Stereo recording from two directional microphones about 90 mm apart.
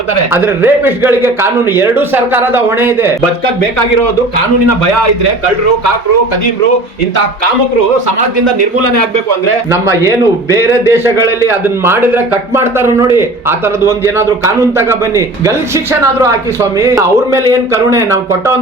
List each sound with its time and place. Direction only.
0.3 s a man's voice: 25° right (ahead or behind)
9.7 s a man's voice: 25° right (ahead or behind)